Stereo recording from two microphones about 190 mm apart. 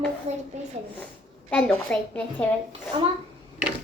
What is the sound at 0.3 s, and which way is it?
Speech, 35° right (ahead or behind).